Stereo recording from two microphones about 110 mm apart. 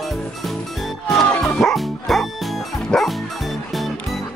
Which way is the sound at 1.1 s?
5° left (ahead or behind).